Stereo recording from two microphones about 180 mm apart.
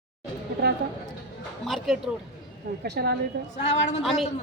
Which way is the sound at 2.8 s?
60° right (ahead or behind).